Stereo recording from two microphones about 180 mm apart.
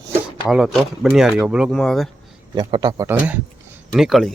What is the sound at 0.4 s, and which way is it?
Speech, 5° right (ahead or behind).